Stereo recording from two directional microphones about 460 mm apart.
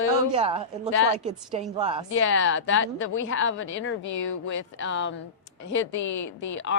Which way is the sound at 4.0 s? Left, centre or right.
Left.